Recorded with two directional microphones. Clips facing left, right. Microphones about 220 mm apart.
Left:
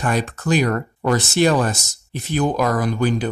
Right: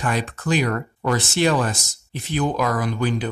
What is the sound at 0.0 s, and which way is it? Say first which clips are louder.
Speech: left 3 dB; 45° left (ahead or behind).